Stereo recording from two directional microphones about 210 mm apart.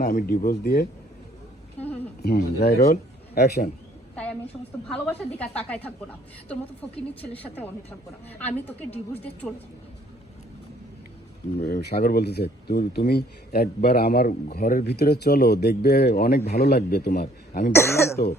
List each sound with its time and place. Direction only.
0.0 s speech: 40° left (ahead or behind)
2.2 s speech: 50° left (ahead or behind)
4.1 s a sound: 5° left (ahead or behind)
5.0 s a woman's voice: 5° left (ahead or behind)
11.6 s speech: 50° left (ahead or behind)
17.7 s a woman's voice: 10° left (ahead or behind)